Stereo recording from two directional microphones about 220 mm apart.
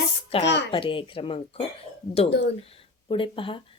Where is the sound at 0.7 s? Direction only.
25° left (ahead or behind).